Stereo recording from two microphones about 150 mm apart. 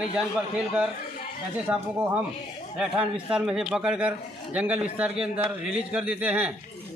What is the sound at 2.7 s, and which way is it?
Speech, 5° right (ahead or behind).